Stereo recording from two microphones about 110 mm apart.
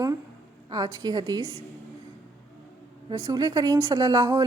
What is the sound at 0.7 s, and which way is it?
Speech, 35° right (ahead or behind).